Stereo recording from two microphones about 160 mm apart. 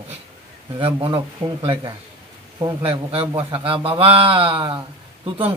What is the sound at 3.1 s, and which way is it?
A man's voice, 35° right (ahead or behind).